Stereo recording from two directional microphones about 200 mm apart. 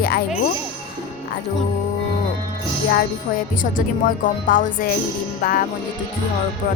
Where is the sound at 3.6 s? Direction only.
45° left (ahead or behind).